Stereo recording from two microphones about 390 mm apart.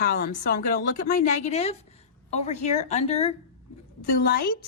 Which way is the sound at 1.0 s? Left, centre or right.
Centre.